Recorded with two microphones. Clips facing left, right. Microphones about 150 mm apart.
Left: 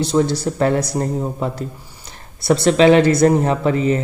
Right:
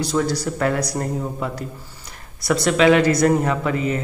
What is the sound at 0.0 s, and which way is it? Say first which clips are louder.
Speech: left 4 dB; 25° left (ahead or behind).